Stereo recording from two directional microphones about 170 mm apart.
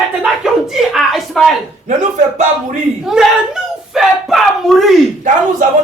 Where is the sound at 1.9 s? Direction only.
45° right (ahead or behind).